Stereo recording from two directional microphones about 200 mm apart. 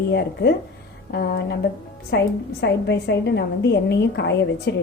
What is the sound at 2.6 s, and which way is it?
A woman's voice, 60° left (ahead or behind).